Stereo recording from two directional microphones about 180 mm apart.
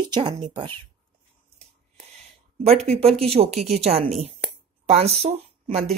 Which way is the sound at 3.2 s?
35° right (ahead or behind).